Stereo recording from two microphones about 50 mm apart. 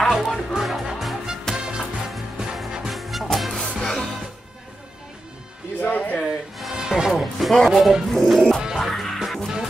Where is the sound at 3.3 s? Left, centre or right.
Centre.